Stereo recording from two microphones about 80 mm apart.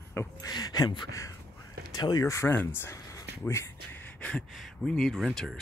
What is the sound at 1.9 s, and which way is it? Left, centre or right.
Speech, left.